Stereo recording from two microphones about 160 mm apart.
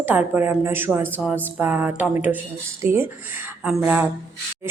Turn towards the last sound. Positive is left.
turn(degrees=-10)  # may be behind; listen again after turning